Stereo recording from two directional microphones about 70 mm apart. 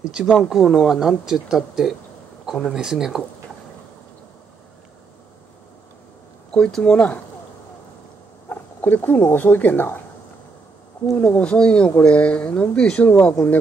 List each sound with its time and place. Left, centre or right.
0.1 s speech: centre
6.5 s speech: centre
8.5 s speech: left
11.1 s speech: centre